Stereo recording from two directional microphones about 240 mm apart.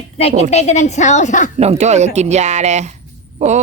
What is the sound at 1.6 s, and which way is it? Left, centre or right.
Speech, right.